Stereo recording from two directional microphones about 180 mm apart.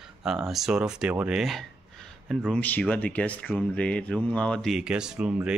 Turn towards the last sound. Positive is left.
turn(degrees=-5)  # may be behind; listen again after turning